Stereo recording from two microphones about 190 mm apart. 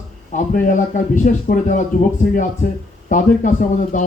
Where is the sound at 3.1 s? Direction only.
40° left (ahead or behind).